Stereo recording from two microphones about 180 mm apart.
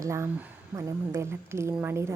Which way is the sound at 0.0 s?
15° right (ahead or behind).